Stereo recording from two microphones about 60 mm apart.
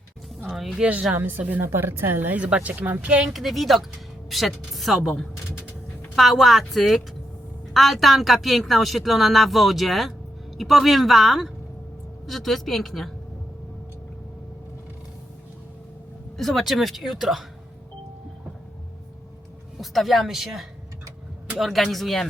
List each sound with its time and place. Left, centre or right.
0.5 s speech: centre
1.1 s speech: right
3.2 s speech: centre
6.1 s speech: centre
16.4 s speech: centre
19.8 s speech: centre